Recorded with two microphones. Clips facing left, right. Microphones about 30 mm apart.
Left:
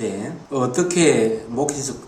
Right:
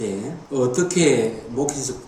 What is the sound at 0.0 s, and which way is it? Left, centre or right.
Speech, centre.